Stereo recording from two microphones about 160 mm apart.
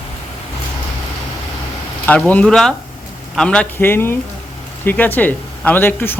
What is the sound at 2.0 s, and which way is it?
Speech, 10° left (ahead or behind).